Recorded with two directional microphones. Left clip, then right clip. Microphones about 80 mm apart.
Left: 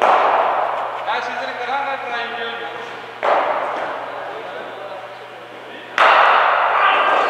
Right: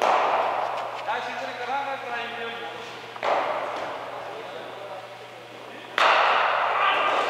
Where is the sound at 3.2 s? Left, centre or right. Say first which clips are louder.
Left 8 dB; centre.